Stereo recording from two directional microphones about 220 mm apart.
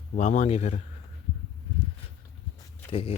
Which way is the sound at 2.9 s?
25° left (ahead or behind).